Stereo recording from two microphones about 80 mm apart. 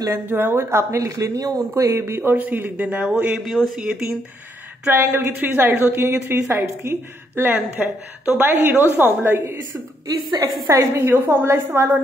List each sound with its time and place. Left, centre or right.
0.1 s speech: right
3.3 s speech: centre
4.8 s a woman's voice: right
10.0 s a woman's voice: right
10.7 s speech: right